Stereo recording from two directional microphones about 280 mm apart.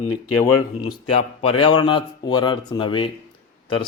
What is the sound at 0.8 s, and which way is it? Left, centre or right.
A man's voice, left.